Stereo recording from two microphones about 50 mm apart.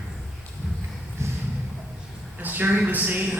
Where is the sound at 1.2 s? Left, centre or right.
Right.